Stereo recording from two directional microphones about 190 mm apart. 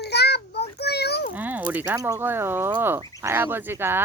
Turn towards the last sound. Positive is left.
turn(degrees=-10)  # may be behind; listen again after turning